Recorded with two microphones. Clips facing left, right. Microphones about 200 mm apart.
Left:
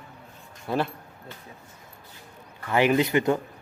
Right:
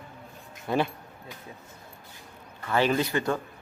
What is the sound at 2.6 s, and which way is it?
Speech, 15° left (ahead or behind).